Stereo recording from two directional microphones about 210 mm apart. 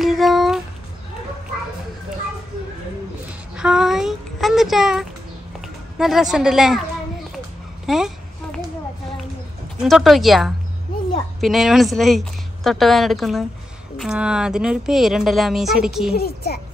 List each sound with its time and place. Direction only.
0.0 s a sound: centre (ahead or behind)
3.5 s a sound: 5° right (ahead or behind)
5.9 s a woman's voice: centre (ahead or behind)
7.8 s babbling: centre (ahead or behind)
9.8 s a woman's voice: centre (ahead or behind)
16.2 s speech: 50° left (ahead or behind)